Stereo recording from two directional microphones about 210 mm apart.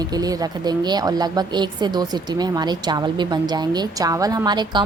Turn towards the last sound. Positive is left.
turn(degrees=-20)  # may be behind; listen again after turning